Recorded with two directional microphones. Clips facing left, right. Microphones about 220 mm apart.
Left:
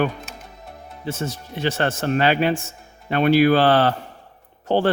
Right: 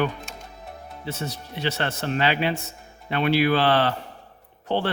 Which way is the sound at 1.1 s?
50° left (ahead or behind).